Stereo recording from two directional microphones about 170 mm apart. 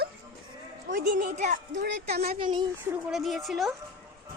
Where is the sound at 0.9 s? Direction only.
50° right (ahead or behind).